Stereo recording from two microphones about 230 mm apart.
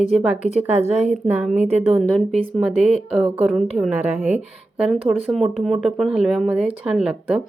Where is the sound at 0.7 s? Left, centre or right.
Right.